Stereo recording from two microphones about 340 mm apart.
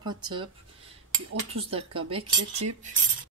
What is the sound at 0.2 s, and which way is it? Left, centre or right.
Speech, centre.